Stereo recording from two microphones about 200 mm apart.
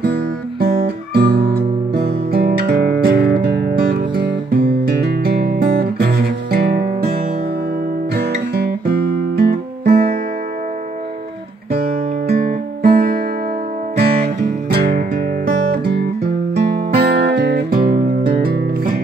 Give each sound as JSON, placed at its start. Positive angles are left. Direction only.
{"t": 0.0, "sound": "guitar", "side_deg": -50}
{"t": 2.0, "sound": "music", "side_deg": -50}
{"t": 5.0, "sound": "guitar", "side_deg": -50}
{"t": 8.1, "sound": "guitar", "side_deg": -50}
{"t": 12.3, "sound": "guitar", "side_deg": -45}
{"t": 13.9, "sound": "music", "side_deg": -50}